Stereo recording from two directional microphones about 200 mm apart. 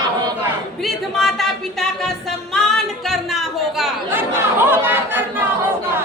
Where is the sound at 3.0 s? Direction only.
Centre (ahead or behind).